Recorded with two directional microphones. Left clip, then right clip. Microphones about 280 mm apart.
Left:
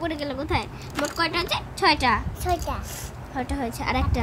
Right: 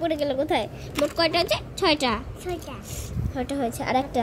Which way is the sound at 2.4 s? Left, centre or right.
Left.